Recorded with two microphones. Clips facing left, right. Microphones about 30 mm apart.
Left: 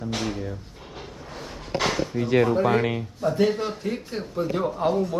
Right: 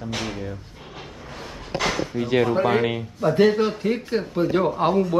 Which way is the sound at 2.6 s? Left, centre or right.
Right.